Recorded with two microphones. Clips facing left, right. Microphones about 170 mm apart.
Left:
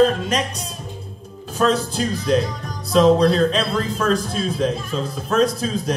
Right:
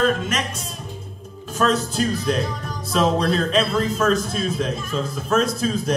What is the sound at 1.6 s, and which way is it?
A man's voice, 35° left (ahead or behind).